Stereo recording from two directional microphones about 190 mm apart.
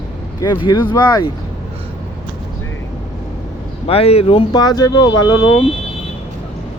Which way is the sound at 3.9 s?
30° left (ahead or behind).